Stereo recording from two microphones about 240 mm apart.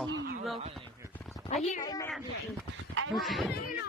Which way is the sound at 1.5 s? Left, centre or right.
Left.